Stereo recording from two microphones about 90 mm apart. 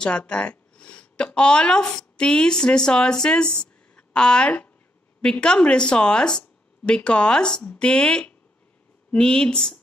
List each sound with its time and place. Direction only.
0.0 s speech: 15° left (ahead or behind)